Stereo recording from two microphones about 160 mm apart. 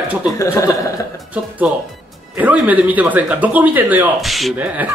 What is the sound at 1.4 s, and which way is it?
A man's voice, 10° right (ahead or behind).